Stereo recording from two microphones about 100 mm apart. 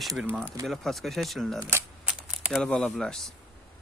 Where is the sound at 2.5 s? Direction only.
5° left (ahead or behind).